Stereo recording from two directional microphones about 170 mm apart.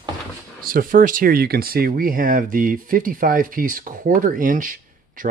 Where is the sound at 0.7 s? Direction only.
55° right (ahead or behind).